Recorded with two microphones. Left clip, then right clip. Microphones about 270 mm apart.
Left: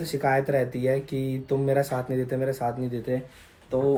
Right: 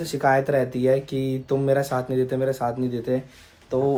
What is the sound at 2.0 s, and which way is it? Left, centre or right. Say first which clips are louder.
Speech: right 4 dB; centre.